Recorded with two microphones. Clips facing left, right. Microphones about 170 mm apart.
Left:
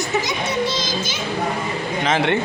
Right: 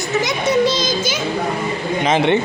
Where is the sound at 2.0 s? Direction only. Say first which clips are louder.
Right 4 dB; 20° right (ahead or behind).